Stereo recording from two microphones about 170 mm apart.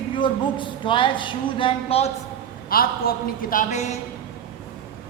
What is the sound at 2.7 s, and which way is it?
A man's voice, 60° left (ahead or behind).